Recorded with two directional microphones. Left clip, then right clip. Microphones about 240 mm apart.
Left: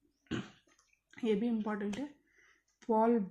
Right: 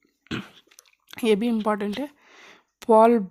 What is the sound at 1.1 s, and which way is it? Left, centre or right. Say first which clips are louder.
Speech: right 12 dB; right.